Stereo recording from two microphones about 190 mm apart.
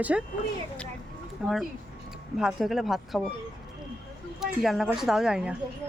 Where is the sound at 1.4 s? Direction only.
Centre (ahead or behind).